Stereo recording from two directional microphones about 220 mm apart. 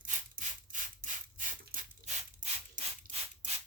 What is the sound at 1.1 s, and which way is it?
Mechanisms, 35° right (ahead or behind).